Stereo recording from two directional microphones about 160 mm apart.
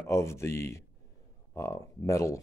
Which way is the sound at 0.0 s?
15° left (ahead or behind).